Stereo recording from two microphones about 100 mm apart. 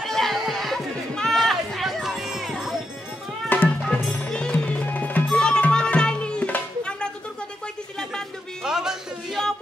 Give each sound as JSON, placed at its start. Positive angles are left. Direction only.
{"t": 0.0, "sound": "chatter", "side_deg": 0}
{"t": 3.4, "sound": "music", "side_deg": 20}
{"t": 8.6, "sound": "a sound", "side_deg": -5}